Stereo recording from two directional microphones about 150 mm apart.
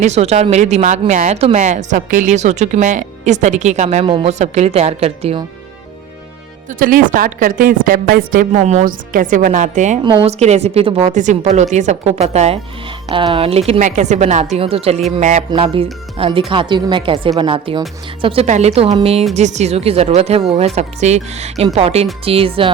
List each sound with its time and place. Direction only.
0.0 s a woman's voice: 45° right (ahead or behind)
4.0 s a woman's voice: 35° right (ahead or behind)
4.3 s a woman's voice: 50° right (ahead or behind)
6.7 s a woman's voice: 65° right (ahead or behind)
10.0 s a woman's voice: 35° right (ahead or behind)
10.3 s a woman's voice: 45° right (ahead or behind)
11.1 s a woman's voice: 55° right (ahead or behind)
14.5 s a woman's voice: 40° right (ahead or behind)
15.2 s a woman's voice: 55° right (ahead or behind)
15.4 s a woman's voice: 35° right (ahead or behind)
18.4 s a woman's voice: 50° right (ahead or behind)